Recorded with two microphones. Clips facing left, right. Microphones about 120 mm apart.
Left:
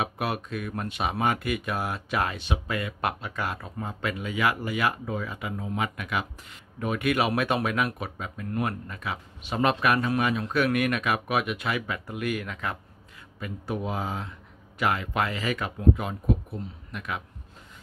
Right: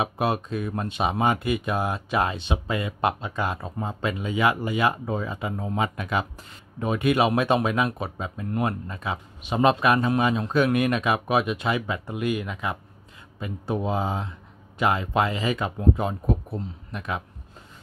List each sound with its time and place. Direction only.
0.0 s speech: 25° right (ahead or behind)
13.4 s speech: 25° right (ahead or behind)